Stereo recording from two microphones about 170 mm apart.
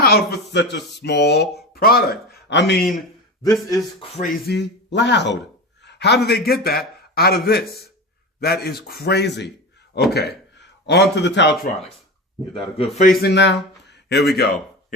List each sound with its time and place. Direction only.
0.0 s speech: 70° left (ahead or behind)
1.7 s speech: 60° left (ahead or behind); by 2.8 s 85° left
3.4 s speech: 20° left (ahead or behind)
4.4 s speech: 85° left
5.8 s a sound: 80° left
6.2 s a man's voice: 65° left (ahead or behind); by 9.5 s 85° left
9.9 s speech: 75° left (ahead or behind); by 11.5 s 90° left
12.5 s a man's voice: 35° left (ahead or behind)
13.1 s a man's voice: 80° left; by 14.9 s 60° left (ahead or behind)